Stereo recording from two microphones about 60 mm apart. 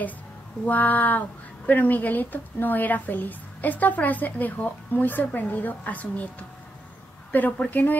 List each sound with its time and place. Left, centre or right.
0.7 s a woman's voice: left
7.3 s a woman's voice: left